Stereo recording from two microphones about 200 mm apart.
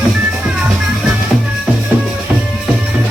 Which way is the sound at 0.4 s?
5° right (ahead or behind).